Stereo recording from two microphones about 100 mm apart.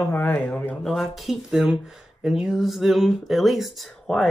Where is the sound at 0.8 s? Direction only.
Centre (ahead or behind).